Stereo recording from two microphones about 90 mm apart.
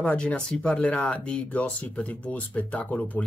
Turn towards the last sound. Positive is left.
turn(degrees=15)  # may be behind; listen again after turning